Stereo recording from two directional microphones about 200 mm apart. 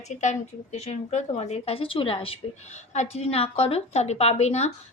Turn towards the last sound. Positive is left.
turn(degrees=35)  # may be behind; listen again after turning